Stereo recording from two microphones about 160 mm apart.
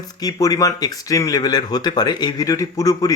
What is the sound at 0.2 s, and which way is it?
Speech, 20° left (ahead or behind).